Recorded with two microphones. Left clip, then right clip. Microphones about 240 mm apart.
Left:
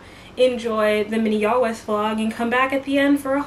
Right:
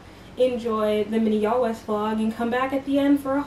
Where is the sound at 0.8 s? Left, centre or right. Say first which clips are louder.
Left 3 dB; centre.